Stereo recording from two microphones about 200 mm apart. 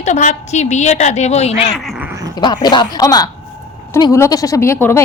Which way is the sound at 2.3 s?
20° left (ahead or behind).